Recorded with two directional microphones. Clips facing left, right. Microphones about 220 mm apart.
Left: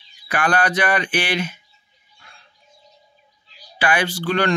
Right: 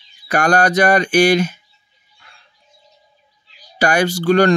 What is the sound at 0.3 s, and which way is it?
Speech, 45° right (ahead or behind).